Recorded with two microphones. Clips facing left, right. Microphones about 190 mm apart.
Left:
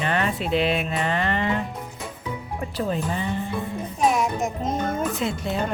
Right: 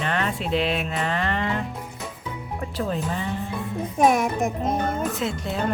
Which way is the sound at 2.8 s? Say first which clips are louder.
Left 1 dB; centre (ahead or behind).